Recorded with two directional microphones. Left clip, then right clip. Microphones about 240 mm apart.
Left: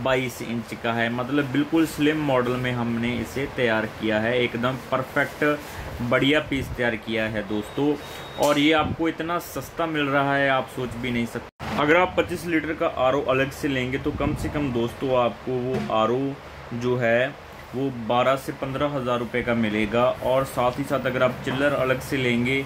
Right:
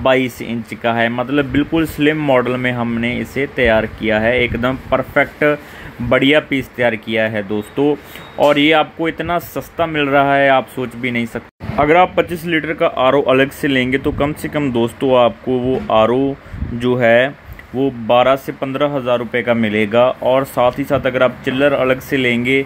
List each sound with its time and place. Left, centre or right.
0.7 s speech: right